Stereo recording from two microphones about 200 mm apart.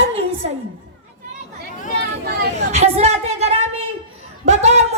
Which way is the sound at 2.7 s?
30° right (ahead or behind).